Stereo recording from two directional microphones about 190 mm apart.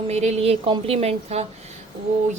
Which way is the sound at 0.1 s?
35° right (ahead or behind).